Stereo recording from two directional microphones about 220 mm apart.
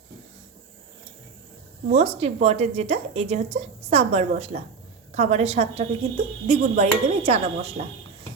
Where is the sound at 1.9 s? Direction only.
30° right (ahead or behind).